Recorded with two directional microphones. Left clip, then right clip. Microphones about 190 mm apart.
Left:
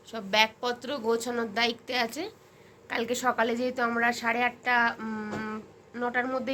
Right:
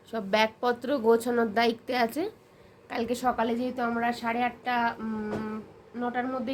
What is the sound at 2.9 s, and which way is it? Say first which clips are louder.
Speech: even; 10° right (ahead or behind).